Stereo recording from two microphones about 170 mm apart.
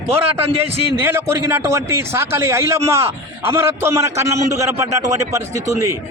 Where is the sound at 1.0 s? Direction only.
15° right (ahead or behind).